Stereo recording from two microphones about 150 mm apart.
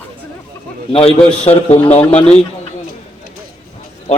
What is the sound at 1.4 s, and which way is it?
Speech, 40° left (ahead or behind).